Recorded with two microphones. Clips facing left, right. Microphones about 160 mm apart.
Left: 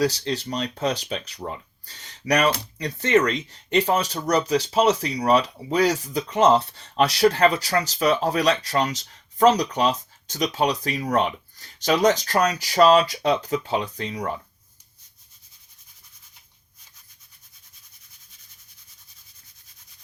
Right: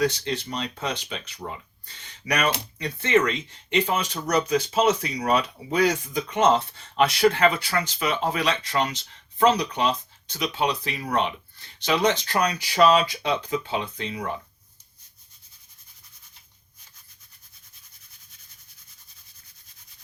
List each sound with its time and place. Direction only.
0.0 s speech: 35° left (ahead or behind)